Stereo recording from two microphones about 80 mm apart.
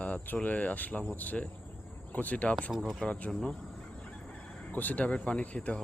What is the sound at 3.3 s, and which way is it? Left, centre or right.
Fowl, centre.